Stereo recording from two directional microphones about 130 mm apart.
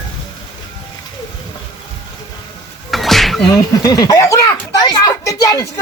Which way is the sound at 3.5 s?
30° left (ahead or behind).